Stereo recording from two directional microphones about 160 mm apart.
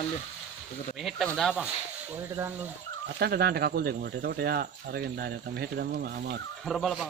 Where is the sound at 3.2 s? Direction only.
80° right.